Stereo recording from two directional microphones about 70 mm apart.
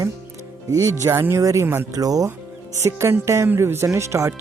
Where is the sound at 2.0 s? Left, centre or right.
Right.